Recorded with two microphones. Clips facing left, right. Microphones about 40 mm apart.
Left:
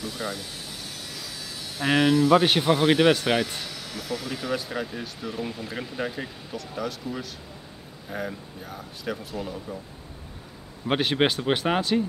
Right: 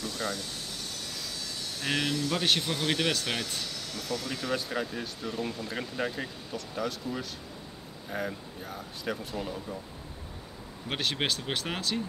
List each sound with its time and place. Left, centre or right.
0.0 s speech: centre
10.9 s speech: centre